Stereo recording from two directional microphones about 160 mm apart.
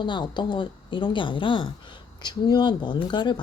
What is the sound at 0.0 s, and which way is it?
Speech, 30° left (ahead or behind).